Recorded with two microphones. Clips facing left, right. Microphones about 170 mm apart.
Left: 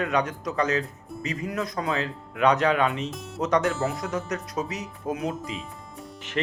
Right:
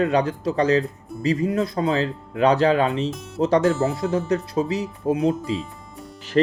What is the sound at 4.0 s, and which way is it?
Speech, 30° right (ahead or behind).